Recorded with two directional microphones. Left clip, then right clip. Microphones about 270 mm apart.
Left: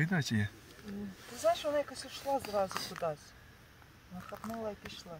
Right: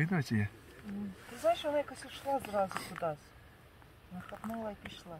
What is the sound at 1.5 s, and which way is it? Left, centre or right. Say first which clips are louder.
Speech: even; centre.